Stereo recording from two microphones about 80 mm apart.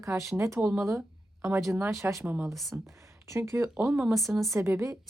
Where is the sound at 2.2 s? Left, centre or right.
Centre.